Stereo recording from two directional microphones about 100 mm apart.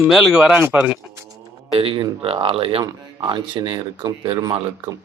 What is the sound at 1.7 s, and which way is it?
Speech, 65° right (ahead or behind).